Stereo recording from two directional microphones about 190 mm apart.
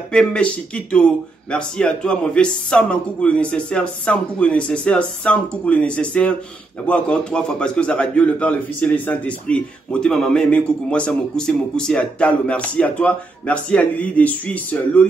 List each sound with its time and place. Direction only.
0.1 s a man's voice: 5° left (ahead or behind)